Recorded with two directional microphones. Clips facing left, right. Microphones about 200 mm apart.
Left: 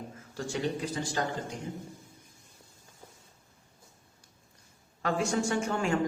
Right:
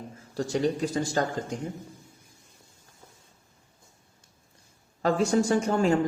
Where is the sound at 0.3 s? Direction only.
40° right (ahead or behind).